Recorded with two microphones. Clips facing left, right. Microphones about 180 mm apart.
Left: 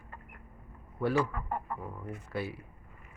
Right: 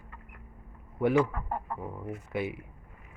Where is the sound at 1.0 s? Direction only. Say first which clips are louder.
Right 4 dB; 20° right (ahead or behind).